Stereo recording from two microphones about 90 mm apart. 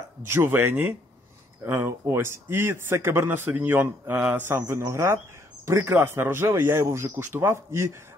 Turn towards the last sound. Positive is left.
turn(degrees=-30)  # may be behind; listen again after turning